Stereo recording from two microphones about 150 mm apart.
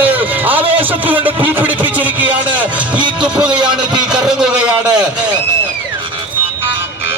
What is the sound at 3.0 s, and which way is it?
Speech, 10° right (ahead or behind).